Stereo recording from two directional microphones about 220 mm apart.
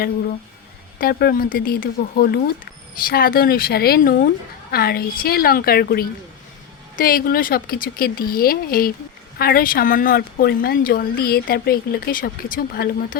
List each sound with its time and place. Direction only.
0.9 s a woman's voice: 45° left (ahead or behind)